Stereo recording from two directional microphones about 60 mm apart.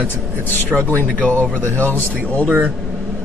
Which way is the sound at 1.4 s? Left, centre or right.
Left.